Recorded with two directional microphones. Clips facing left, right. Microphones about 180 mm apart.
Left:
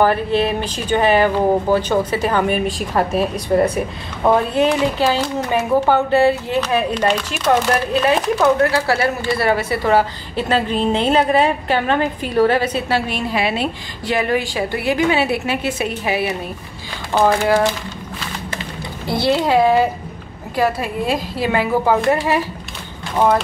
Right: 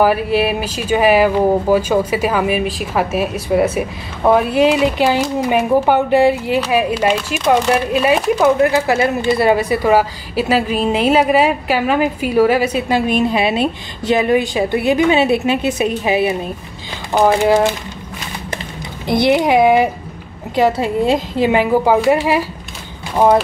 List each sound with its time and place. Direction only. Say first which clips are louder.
0.0 s speech: right 2 dB; 10° right (ahead or behind)
19.0 s speech: right 4 dB; 15° right (ahead or behind)